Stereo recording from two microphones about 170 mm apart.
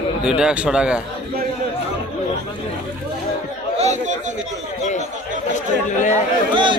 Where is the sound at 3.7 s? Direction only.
40° right (ahead or behind).